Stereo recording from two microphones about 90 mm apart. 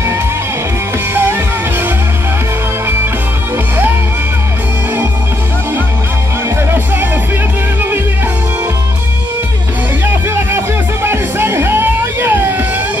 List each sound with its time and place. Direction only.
11.1 s music: 25° right (ahead or behind)